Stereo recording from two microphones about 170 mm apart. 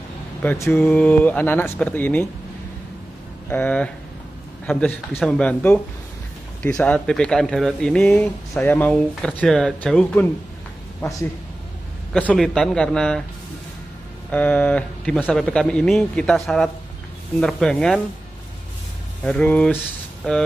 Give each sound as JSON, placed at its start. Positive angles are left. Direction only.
{"t": 0.4, "sound": "speech", "side_deg": 10}
{"t": 3.4, "sound": "speech", "side_deg": 10}
{"t": 11.0, "sound": "speech", "side_deg": 20}
{"t": 12.1, "sound": "speech", "side_deg": 5}
{"t": 14.3, "sound": "speech", "side_deg": 10}
{"t": 19.2, "sound": "speech", "side_deg": 5}